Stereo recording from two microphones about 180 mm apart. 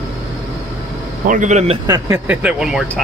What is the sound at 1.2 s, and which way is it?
Speech, 45° right (ahead or behind).